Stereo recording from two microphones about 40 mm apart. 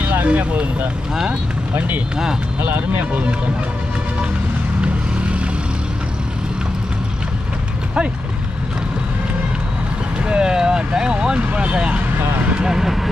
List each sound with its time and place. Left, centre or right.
0.3 s speech: right
2.6 s speech: right
10.2 s speech: right
12.5 s speech: centre